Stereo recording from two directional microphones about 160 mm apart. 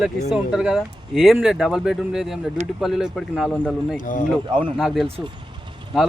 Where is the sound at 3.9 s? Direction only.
55° left (ahead or behind).